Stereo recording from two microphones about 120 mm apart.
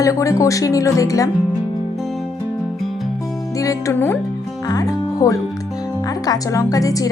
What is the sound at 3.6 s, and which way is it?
Speech, 25° left (ahead or behind).